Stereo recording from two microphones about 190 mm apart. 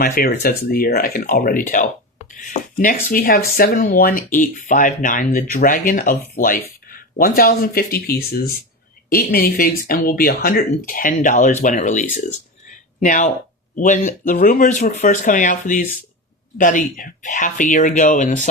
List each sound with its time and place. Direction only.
0.0 s speech: 50° left (ahead or behind)